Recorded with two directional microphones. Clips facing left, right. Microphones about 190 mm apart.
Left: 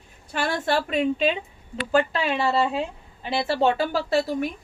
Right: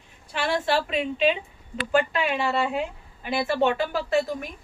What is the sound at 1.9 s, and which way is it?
A woman's voice, 35° left (ahead or behind).